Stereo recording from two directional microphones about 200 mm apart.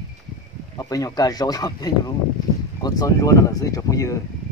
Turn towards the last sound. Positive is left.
turn(degrees=15)  # may be behind; listen again after turning